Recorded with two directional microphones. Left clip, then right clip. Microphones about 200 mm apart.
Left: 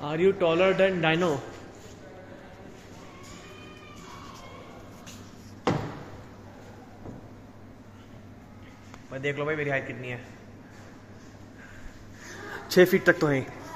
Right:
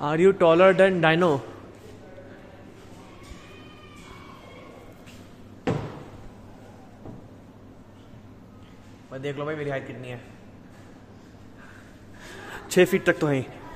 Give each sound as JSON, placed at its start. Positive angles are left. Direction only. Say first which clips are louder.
{"t": 0.0, "sound": "a man's voice", "louder": "right 5 dB", "side_deg": -40}
{"t": 9.1, "sound": "a man's voice", "louder": "left 2 dB", "side_deg": -5}
{"t": 12.4, "sound": "a man's voice", "louder": "even", "side_deg": -10}